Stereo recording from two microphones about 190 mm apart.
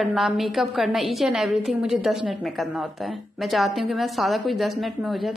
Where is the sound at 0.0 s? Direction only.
Centre (ahead or behind).